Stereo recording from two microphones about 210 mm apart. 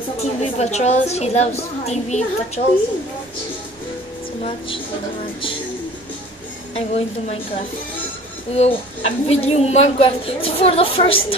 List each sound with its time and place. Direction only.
0.2 s a woman's voice: 30° left (ahead or behind)
6.7 s a woman's voice: 30° left (ahead or behind)
8.5 s a woman's voice: 30° left (ahead or behind)